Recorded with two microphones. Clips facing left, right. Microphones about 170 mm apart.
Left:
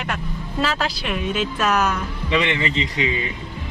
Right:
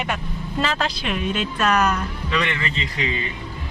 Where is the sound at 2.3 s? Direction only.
20° left (ahead or behind).